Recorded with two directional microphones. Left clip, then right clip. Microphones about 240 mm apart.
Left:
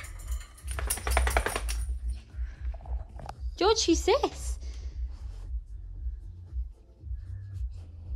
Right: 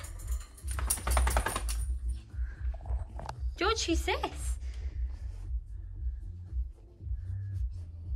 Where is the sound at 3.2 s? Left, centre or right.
Centre.